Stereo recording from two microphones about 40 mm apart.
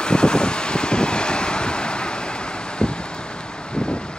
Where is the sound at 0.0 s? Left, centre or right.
Left.